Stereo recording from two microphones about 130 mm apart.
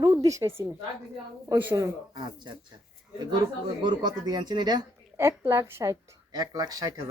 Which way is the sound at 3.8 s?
30° right (ahead or behind).